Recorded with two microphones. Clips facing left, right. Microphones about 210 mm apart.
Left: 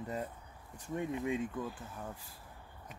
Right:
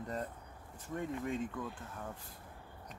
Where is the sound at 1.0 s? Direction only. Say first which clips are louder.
Left 2 dB; 15° left (ahead or behind).